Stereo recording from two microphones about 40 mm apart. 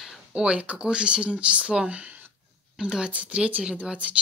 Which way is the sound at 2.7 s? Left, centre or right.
Centre.